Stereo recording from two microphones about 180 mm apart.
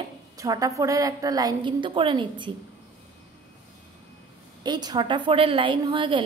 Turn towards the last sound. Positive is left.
turn(degrees=-30)  # may be behind; listen again after turning